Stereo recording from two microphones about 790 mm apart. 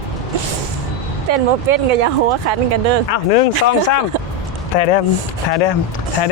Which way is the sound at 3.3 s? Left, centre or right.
Left.